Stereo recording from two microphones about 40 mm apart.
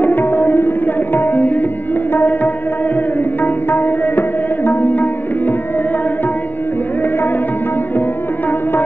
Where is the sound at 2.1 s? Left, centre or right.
Left.